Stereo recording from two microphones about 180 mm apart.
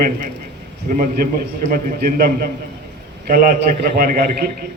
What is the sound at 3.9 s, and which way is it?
Speech, 55° right (ahead or behind).